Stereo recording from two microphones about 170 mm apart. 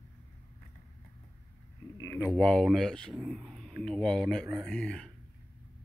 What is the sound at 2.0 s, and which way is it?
Speech, 15° left (ahead or behind).